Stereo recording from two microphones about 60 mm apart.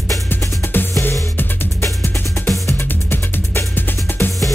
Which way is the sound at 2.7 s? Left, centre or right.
Left.